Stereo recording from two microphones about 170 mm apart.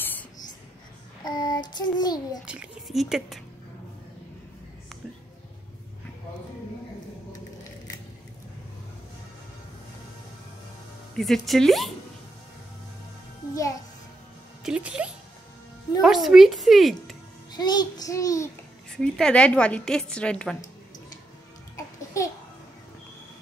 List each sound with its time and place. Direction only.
1.2 s child singing: 25° left (ahead or behind)
2.4 s speech: 5° right (ahead or behind)
11.1 s speech: centre (ahead or behind)
14.6 s music: 5° right (ahead or behind)
16.0 s speech: centre (ahead or behind)
17.5 s child singing: 25° left (ahead or behind)
18.9 s speech: 5° left (ahead or behind)
21.7 s babbling: 20° left (ahead or behind)